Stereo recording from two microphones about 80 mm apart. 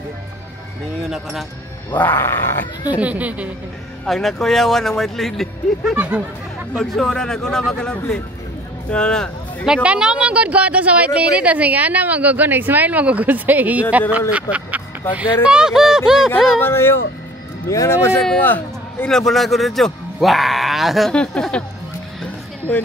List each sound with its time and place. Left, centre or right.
2.0 s grunt: left
3.0 s speech: centre
4.0 s speech: centre
5.9 s speech: centre
6.8 s a man's voice: centre
9.8 s speech: centre
16.6 s grunt: left
17.6 s speech: left
19.0 s speech: centre
21.1 s a man's voice: centre